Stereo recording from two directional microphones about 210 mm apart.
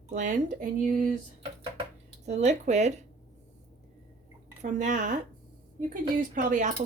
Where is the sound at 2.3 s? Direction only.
35° right (ahead or behind).